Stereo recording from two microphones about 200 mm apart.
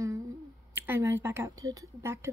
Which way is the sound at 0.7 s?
10° right (ahead or behind).